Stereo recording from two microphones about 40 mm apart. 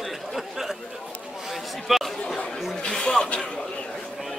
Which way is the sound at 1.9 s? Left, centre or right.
Centre.